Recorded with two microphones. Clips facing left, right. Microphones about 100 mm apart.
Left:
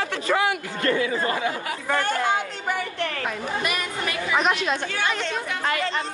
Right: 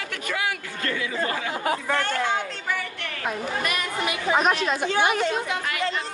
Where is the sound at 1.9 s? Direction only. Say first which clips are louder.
Left 6 dB; 15° left (ahead or behind).